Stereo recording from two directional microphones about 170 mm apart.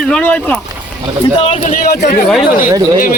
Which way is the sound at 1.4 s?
40° left (ahead or behind).